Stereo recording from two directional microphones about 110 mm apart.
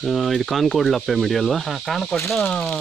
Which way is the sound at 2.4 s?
15° left (ahead or behind).